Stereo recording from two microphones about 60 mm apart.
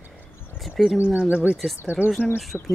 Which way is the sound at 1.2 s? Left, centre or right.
Right.